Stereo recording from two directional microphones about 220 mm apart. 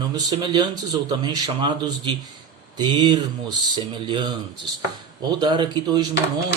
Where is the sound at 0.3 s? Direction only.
20° right (ahead or behind).